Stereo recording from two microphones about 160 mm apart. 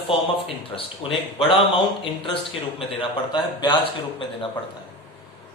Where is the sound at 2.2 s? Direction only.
35° left (ahead or behind).